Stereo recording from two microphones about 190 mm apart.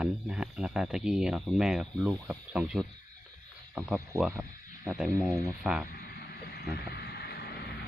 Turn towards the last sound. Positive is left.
turn(degrees=55)  # may be behind; listen again after turning